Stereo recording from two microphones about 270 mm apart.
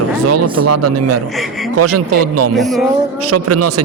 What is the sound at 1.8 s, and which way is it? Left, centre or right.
Speech, right.